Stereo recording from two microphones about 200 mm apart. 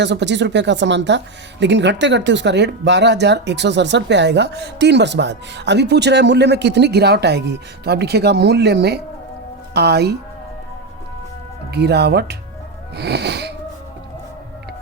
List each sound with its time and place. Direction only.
0.0 s speech: 60° right (ahead or behind)
11.7 s speech: 55° right (ahead or behind)